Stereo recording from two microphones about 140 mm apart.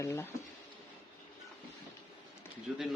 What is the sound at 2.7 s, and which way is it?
Speech, centre (ahead or behind).